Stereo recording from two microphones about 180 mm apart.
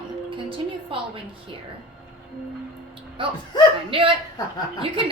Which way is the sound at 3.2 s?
30° right (ahead or behind).